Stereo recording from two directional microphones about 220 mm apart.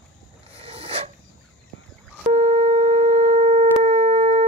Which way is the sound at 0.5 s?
25° right (ahead or behind).